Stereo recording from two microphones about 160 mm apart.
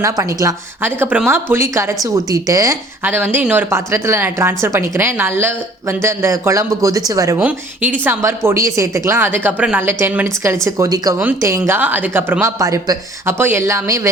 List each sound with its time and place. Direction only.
0.0 s speech: 20° right (ahead or behind)